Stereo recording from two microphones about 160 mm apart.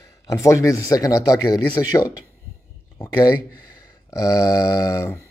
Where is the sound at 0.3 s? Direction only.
20° left (ahead or behind).